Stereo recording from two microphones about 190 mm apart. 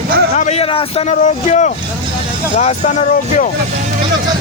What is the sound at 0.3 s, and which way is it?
Speech, 35° left (ahead or behind).